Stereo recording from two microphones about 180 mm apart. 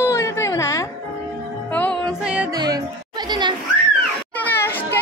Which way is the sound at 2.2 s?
5° right (ahead or behind).